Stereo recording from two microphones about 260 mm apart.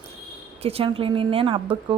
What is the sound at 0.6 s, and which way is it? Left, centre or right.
A woman's voice, right.